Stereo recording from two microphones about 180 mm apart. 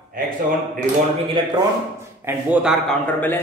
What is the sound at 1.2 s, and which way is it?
Speech, 25° right (ahead or behind).